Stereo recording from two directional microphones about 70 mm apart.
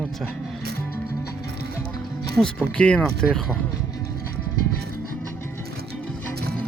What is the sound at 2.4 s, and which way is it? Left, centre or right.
Speech, centre.